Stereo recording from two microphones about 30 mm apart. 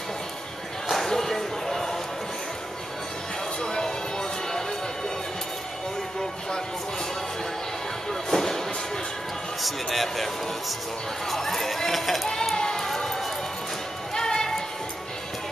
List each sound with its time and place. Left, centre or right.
0.9 s basketball bounce: centre
3.6 s music: left
8.1 s music: centre
9.6 s basketball bounce: centre
11.2 s run: centre
12.5 s run: left
12.8 s run: centre
14.1 s music: left